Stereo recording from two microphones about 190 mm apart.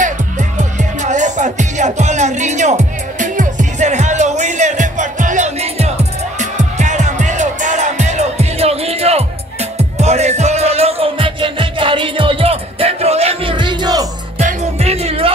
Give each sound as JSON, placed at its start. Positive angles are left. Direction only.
{"t": 0.6, "sound": "music", "side_deg": -40}
{"t": 14.4, "sound": "music", "side_deg": -35}